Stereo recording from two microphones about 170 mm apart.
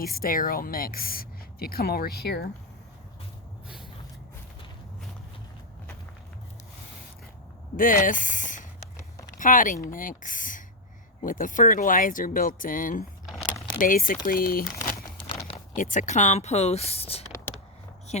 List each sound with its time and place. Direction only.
0.0 s a woman's voice: 60° left (ahead or behind)
7.8 s speech: 55° left (ahead or behind)
13.2 s typing: centre (ahead or behind)
13.7 s a woman's voice: 55° left (ahead or behind); by 17.2 s 35° left (ahead or behind)